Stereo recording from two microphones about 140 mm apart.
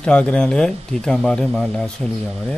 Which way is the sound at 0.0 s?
5° left (ahead or behind).